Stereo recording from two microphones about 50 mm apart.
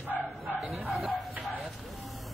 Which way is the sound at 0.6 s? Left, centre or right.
Centre.